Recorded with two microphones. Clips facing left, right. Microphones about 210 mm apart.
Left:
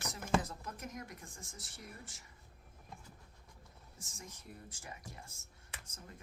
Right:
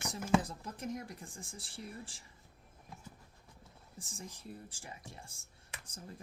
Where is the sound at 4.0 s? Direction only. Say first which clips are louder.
Right 5 dB; 30° right (ahead or behind).